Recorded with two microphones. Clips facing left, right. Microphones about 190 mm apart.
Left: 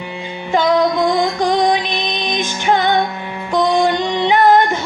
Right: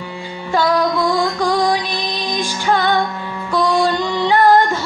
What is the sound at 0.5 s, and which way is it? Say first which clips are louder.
Music: left 2 dB; 20° left (ahead or behind).